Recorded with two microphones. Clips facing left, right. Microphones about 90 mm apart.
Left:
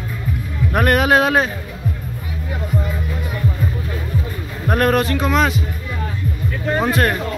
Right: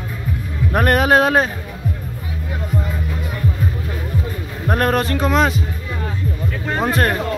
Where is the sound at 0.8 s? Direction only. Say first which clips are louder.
Even; 35° right (ahead or behind).